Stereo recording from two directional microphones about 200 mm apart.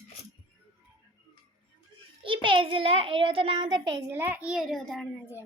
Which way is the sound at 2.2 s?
25° right (ahead or behind).